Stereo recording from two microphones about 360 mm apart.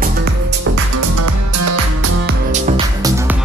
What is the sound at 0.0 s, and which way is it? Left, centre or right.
Music, right.